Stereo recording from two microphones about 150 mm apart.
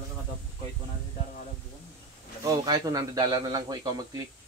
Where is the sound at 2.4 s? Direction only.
25° right (ahead or behind).